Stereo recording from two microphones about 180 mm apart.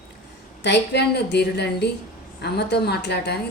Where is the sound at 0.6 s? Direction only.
70° left (ahead or behind).